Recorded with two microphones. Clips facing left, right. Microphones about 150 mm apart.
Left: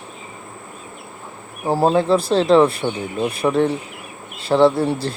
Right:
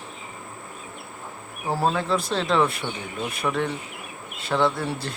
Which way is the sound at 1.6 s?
30° left (ahead or behind).